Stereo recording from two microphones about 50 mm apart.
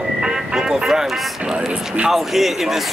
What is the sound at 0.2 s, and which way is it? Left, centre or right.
Music, centre.